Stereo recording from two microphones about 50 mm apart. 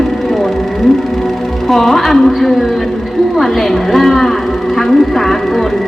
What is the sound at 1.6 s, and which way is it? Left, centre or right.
A woman's voice, centre.